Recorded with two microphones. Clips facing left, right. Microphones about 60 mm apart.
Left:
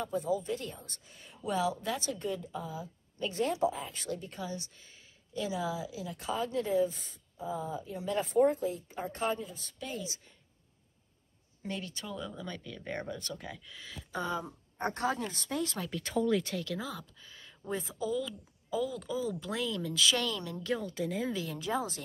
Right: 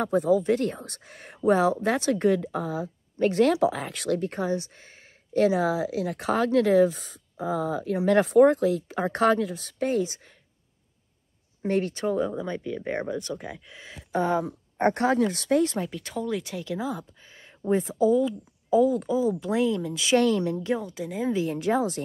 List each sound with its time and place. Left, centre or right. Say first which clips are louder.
0.0 s speech: right 10 dB; right
11.6 s speech: right 14 dB; right
12.4 s speech: right 11 dB; right
14.4 s speech: right 12 dB; right
15.1 s speech: right 14 dB; right
15.6 s speech: right 10 dB; right
15.9 s speech: even; centre
16.6 s speech: right 8 dB; right
19.1 s speech: right 10 dB; right
20.2 s speech: right 12 dB; right
21.5 s speech: right 9 dB; right